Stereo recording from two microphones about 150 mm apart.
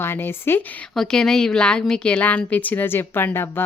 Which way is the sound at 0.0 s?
15° left (ahead or behind).